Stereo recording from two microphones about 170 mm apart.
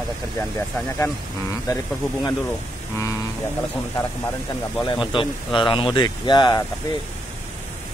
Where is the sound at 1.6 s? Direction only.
20° left (ahead or behind).